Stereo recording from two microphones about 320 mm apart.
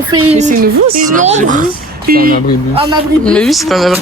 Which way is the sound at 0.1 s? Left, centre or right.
Centre.